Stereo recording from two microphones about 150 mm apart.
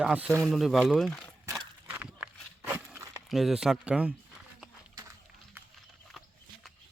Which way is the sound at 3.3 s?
Centre (ahead or behind).